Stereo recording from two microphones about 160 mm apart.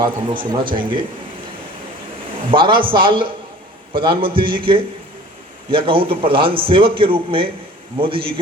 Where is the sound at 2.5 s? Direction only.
30° right (ahead or behind).